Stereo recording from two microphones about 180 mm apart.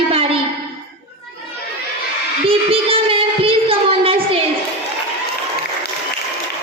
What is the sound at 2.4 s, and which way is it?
Child singing, 30° right (ahead or behind).